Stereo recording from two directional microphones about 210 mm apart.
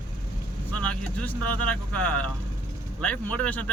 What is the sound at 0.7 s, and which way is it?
Speech, 5° left (ahead or behind).